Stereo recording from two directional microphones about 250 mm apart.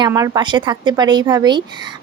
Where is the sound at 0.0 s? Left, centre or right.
Centre.